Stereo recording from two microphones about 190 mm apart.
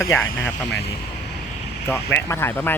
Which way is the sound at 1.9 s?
10° left (ahead or behind).